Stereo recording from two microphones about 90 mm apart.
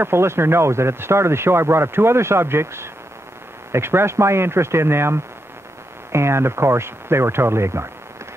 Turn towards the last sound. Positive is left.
turn(degrees=-30)  # may be behind; listen again after turning